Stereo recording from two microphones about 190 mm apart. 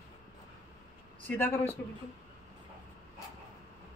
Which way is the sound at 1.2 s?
10° left (ahead or behind).